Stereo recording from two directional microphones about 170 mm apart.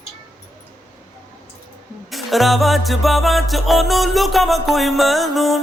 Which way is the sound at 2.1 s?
Centre (ahead or behind).